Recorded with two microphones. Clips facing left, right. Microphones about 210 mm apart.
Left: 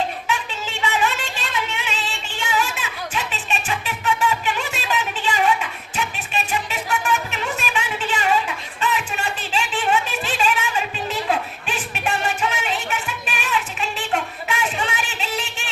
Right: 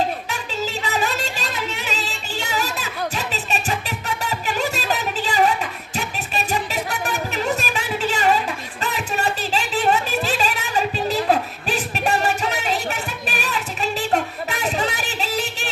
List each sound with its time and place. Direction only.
0.3 s music: 40° right (ahead or behind)